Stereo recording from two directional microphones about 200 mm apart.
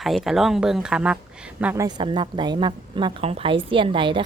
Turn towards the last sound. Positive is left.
turn(degrees=-25)  # may be behind; listen again after turning